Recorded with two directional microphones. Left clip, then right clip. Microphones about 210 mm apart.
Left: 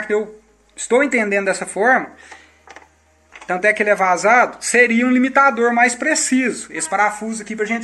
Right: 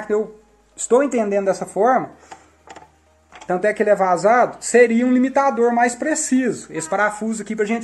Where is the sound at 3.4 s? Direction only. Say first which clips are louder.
Left 1 dB; 30° right (ahead or behind).